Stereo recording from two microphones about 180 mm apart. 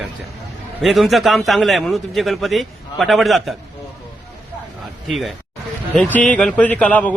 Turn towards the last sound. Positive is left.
turn(degrees=10)  # may be behind; listen again after turning